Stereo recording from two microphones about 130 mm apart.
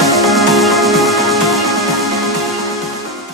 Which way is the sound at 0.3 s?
Centre (ahead or behind).